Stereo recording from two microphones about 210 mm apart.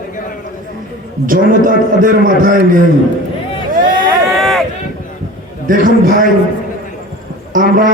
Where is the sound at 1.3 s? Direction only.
40° right (ahead or behind).